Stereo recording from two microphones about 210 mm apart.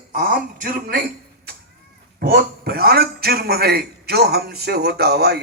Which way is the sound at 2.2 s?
45° right (ahead or behind).